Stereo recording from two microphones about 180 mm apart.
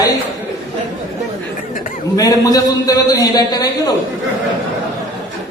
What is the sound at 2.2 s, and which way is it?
A man's voice, 20° left (ahead or behind).